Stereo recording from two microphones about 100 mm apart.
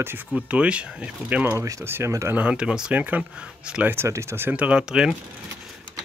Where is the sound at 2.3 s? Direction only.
10° right (ahead or behind).